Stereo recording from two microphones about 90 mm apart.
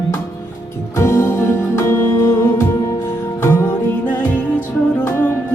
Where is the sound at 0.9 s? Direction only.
30° left (ahead or behind).